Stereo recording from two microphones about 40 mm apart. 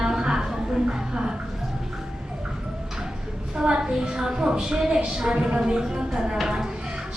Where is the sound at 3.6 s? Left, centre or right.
Centre.